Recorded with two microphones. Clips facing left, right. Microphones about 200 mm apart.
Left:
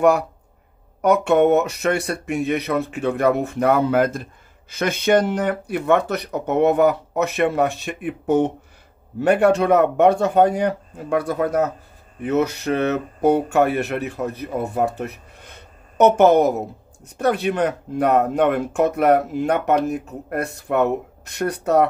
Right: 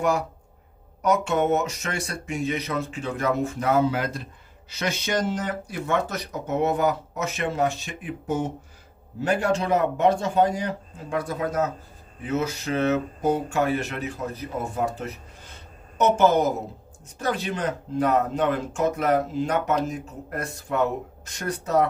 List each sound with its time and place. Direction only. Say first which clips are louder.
1.0 s speech: left 7 dB; 60° left (ahead or behind)